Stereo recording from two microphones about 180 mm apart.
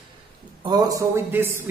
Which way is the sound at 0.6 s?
20° right (ahead or behind).